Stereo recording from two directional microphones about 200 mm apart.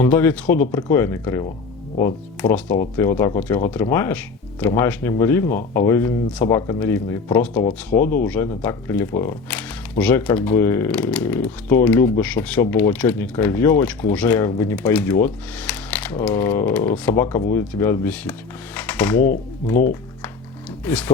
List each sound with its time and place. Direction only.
0.0 s speech: 10° left (ahead or behind)
7.9 s speech: 45° left (ahead or behind)
8.2 s speech: 10° left (ahead or behind)
20.8 s speech: 10° left (ahead or behind)